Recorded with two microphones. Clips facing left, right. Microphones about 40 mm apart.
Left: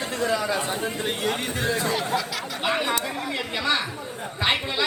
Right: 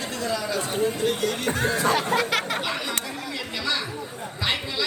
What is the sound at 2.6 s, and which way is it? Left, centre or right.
Chatter, left.